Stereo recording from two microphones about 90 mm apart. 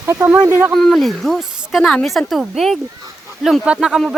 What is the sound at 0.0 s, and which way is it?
Speech, 30° right (ahead or behind).